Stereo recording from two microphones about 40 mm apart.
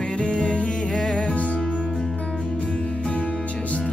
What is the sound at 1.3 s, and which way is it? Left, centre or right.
Music, left.